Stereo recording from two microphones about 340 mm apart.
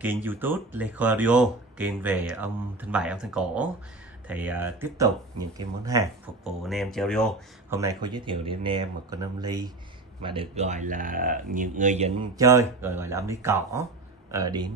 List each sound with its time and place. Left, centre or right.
0.0 s speech: centre
7.8 s speech: centre